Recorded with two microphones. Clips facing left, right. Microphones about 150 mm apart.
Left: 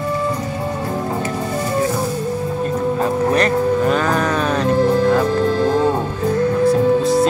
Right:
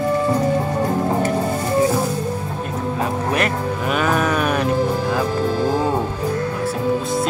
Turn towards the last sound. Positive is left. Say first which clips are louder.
# left 7 dB
turn(degrees=0)  # may be behind; listen again after turning